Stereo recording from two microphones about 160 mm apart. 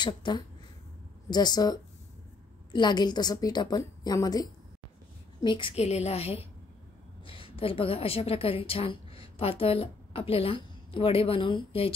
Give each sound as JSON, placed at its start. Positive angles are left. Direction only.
{"t": 0.0, "sound": "a woman's voice", "side_deg": 30}